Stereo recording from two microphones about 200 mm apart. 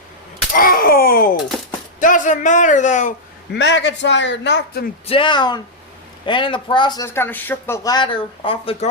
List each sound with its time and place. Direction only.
0.5 s a sound: 45° left (ahead or behind)
2.0 s a man's voice: 40° left (ahead or behind)
3.5 s a man's voice: 60° left (ahead or behind)
5.0 s speech: 25° left (ahead or behind)